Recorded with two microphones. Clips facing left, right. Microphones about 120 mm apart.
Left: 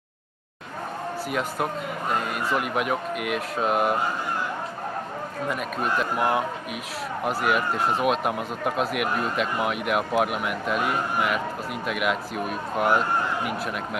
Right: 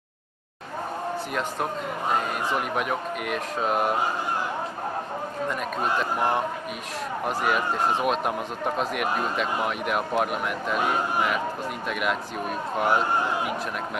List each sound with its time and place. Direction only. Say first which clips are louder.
1.3 s a man's voice: left 4 dB; centre (ahead or behind)
5.5 s a man's voice: left 1 dB; 5° left (ahead or behind)